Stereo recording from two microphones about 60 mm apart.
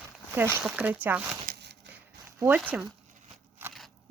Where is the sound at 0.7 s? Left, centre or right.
Right.